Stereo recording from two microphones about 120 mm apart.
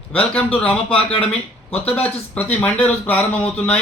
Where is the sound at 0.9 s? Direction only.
50° left (ahead or behind).